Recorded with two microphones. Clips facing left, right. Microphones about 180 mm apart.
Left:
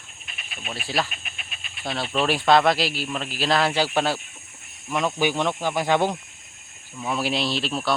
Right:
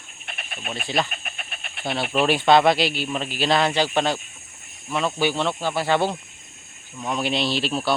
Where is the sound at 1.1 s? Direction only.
50° right (ahead or behind).